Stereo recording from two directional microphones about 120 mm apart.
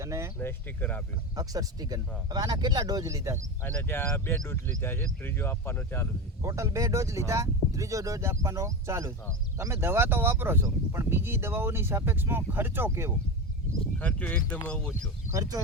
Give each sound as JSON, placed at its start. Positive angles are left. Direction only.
{"t": 0.0, "sound": "speech", "side_deg": -25}
{"t": 0.3, "sound": "speech", "side_deg": 15}
{"t": 1.4, "sound": "speech", "side_deg": -30}
{"t": 3.6, "sound": "speech", "side_deg": 15}
{"t": 6.4, "sound": "speech", "side_deg": -25}
{"t": 14.0, "sound": "speech", "side_deg": 10}
{"t": 15.3, "sound": "speech", "side_deg": -30}